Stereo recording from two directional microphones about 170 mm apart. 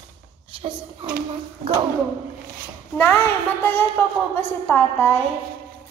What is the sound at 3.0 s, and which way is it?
A woman's voice, 10° left (ahead or behind).